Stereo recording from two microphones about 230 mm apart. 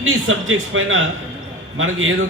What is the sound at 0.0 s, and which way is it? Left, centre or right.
A man's voice, right.